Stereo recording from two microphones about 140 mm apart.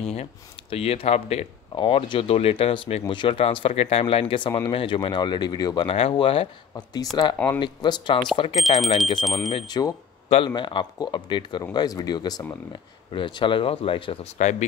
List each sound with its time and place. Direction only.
0.1 s speech: 45° left (ahead or behind)
1.8 s speech: 35° left (ahead or behind)
5.9 s speech: 45° left (ahead or behind)
7.4 s speech: 30° left (ahead or behind)
8.5 s speech: centre (ahead or behind)
9.5 s speech: 35° left (ahead or behind)
14.4 s speech: 60° left (ahead or behind)